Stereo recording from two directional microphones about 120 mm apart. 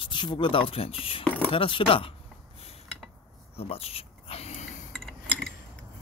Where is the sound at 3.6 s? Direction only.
55° left (ahead or behind).